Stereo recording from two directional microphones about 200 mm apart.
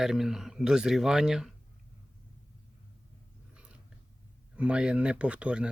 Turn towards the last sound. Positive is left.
turn(degrees=-5)  # may be behind; listen again after turning